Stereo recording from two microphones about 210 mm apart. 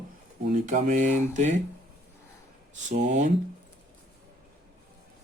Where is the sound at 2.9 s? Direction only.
35° right (ahead or behind).